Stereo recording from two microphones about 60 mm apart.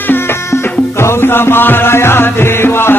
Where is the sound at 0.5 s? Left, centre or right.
Left.